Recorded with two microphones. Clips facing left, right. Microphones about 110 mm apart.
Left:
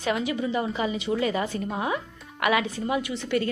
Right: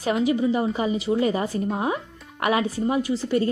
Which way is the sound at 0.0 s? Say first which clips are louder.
Right 5 dB; 30° right (ahead or behind).